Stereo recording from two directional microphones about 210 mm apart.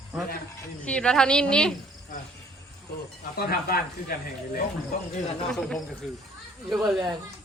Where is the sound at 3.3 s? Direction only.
45° left (ahead or behind).